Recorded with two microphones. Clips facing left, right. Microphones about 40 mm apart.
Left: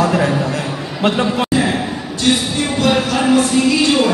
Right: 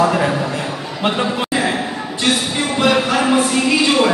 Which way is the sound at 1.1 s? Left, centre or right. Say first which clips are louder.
Left 2 dB; centre.